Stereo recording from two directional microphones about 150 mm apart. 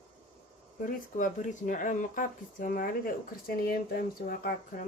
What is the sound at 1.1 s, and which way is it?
Speech, 60° left (ahead or behind).